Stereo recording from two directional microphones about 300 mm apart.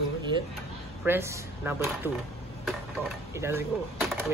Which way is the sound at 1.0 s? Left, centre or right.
Centre.